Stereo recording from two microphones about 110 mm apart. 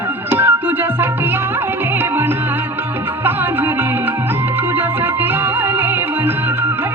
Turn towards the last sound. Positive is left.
turn(degrees=-20)  # may be behind; listen again after turning